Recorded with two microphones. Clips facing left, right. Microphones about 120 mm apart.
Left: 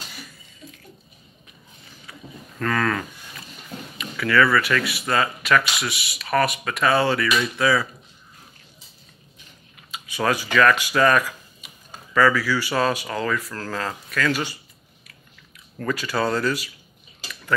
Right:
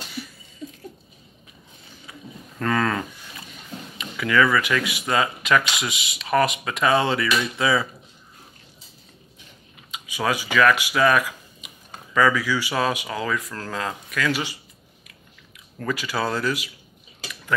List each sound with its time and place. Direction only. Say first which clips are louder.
2.6 s speech: right 1 dB; 20° right (ahead or behind)
9.8 s speech: left 2 dB; 15° right (ahead or behind)
15.8 s speech: left 2 dB; 10° right (ahead or behind)